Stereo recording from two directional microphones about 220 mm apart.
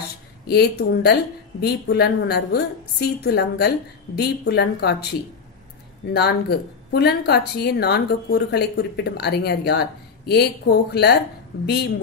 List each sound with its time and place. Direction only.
0.5 s speech: 45° left (ahead or behind)
6.1 s speech: 45° left (ahead or behind)